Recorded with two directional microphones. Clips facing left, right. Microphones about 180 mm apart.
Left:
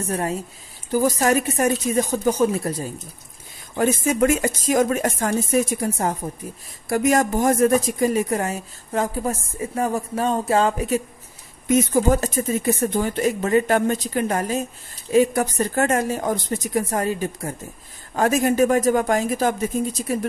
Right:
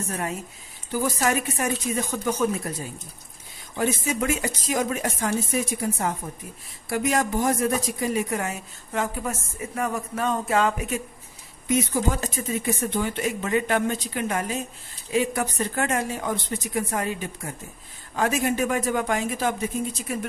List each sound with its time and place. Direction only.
0.1 s speech: 35° left (ahead or behind)
3.7 s speech: 50° left (ahead or behind)
11.6 s speech: 45° left (ahead or behind)